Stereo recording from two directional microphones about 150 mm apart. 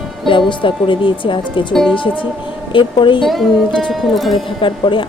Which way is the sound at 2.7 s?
35° left (ahead or behind).